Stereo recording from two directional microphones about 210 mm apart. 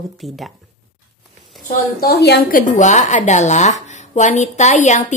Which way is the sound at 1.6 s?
45° left (ahead or behind).